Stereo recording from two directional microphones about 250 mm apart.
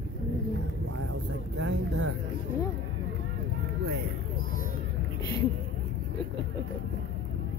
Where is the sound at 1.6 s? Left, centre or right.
Right.